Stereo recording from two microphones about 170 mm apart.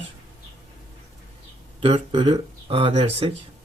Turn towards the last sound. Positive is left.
turn(degrees=-35)  # may be behind; listen again after turning